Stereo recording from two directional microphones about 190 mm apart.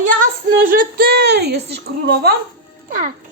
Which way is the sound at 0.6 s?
50° right (ahead or behind).